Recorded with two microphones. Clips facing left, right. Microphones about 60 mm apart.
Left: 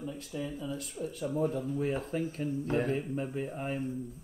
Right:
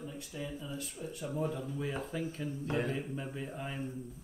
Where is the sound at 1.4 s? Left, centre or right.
Left.